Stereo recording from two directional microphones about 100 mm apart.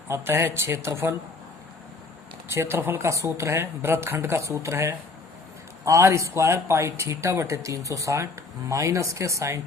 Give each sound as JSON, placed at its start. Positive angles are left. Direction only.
{"t": 0.1, "sound": "speech", "side_deg": -25}
{"t": 2.5, "sound": "speech", "side_deg": -25}